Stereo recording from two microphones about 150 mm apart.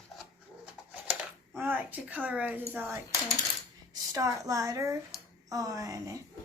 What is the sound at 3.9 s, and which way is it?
A woman's voice, 25° right (ahead or behind).